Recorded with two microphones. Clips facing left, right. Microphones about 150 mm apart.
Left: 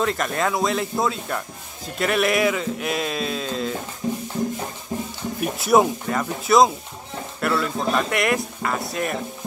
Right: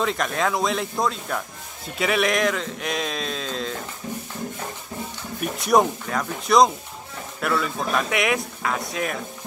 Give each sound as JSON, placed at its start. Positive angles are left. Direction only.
{"t": 0.0, "sound": "a man's voice", "side_deg": 0}
{"t": 4.0, "sound": "music", "side_deg": 25}
{"t": 5.4, "sound": "a man's voice", "side_deg": 5}